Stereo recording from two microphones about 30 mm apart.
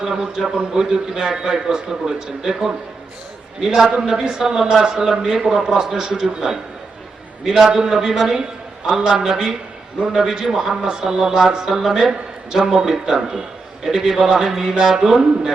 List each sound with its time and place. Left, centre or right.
0.0 s a man's voice: centre
4.8 s a man's voice: right; by 14.0 s centre
14.3 s speech: centre
14.8 s a man's voice: right